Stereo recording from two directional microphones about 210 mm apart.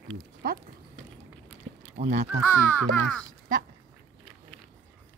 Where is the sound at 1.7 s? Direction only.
55° right (ahead or behind).